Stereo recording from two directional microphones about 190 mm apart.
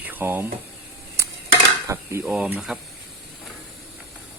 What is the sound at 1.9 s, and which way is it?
Speech, 15° right (ahead or behind).